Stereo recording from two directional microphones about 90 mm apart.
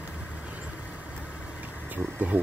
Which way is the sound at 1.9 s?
15° right (ahead or behind).